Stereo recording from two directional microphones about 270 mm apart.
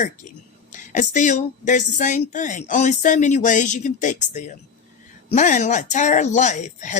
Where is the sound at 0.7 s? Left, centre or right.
Left.